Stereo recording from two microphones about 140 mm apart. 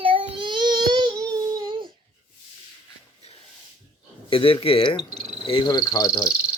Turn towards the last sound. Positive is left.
turn(degrees=-5)  # may be behind; listen again after turning